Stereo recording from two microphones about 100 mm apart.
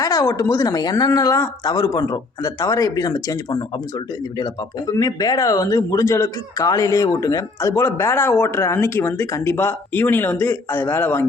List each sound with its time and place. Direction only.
0.0 s speech: 35° left (ahead or behind)
4.9 s speech: 35° left (ahead or behind)